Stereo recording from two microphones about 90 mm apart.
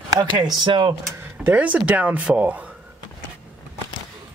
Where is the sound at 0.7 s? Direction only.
60° right (ahead or behind).